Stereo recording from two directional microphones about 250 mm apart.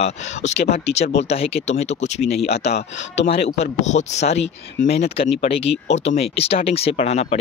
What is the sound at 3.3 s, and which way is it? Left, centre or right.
Speech, left.